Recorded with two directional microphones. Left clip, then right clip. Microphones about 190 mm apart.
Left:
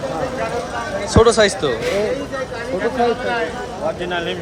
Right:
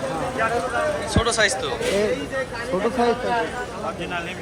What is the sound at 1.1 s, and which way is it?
Speech, 30° left (ahead or behind).